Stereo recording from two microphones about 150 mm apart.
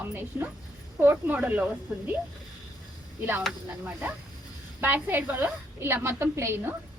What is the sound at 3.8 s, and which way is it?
Speech, 10° right (ahead or behind).